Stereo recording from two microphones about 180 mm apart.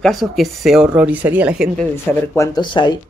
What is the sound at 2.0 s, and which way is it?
Speech, 15° left (ahead or behind).